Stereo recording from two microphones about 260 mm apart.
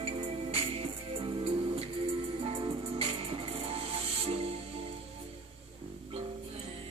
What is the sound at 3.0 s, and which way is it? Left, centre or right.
Music, right.